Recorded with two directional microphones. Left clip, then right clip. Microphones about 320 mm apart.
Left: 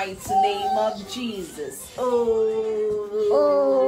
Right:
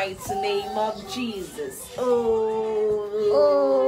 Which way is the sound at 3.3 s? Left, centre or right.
Centre.